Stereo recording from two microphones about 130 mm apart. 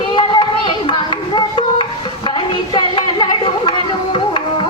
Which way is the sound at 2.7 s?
35° left (ahead or behind).